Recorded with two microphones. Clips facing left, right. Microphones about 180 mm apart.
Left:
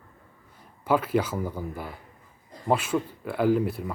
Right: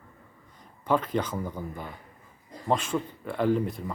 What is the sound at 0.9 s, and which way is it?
Speech, 5° left (ahead or behind).